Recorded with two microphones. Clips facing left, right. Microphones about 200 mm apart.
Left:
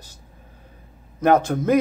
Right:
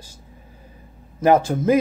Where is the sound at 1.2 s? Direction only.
5° right (ahead or behind).